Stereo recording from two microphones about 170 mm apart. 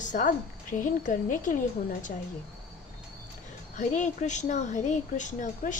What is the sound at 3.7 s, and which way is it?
Speech, 45° left (ahead or behind).